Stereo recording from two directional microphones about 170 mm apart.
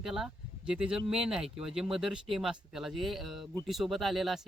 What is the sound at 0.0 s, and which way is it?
Speech, 5° right (ahead or behind).